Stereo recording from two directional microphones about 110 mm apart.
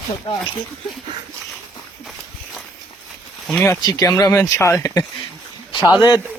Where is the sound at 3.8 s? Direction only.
35° left (ahead or behind).